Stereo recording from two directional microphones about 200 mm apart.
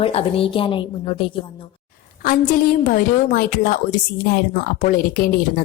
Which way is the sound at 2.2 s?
45° left (ahead or behind).